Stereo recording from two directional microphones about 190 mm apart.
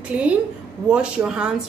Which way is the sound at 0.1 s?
5° right (ahead or behind).